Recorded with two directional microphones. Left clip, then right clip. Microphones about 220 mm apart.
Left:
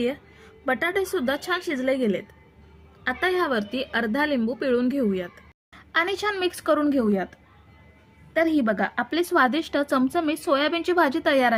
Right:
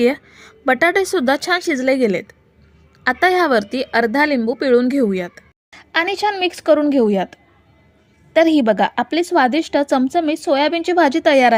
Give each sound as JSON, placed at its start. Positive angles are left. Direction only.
{"t": 0.0, "sound": "a woman's voice", "side_deg": -35}